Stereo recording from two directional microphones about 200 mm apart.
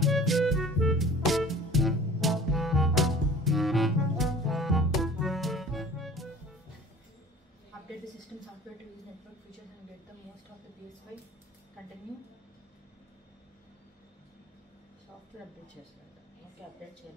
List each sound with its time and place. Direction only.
0.0 s music: centre (ahead or behind)